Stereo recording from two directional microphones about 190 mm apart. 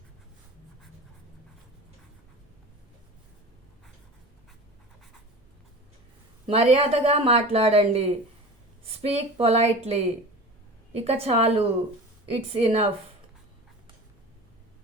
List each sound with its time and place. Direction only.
6.5 s speech: 30° right (ahead or behind)